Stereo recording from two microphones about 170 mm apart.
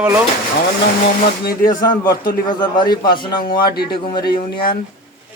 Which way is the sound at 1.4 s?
55° left (ahead or behind).